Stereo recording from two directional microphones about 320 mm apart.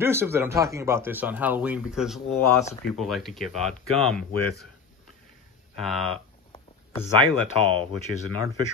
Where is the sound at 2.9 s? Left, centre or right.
Centre.